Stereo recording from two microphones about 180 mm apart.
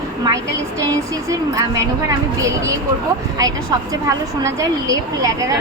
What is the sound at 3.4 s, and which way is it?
Speech, 20° right (ahead or behind).